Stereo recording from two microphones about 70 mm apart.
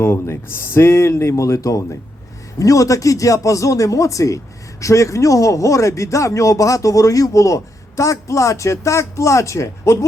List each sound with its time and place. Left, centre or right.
0.0 s speech: left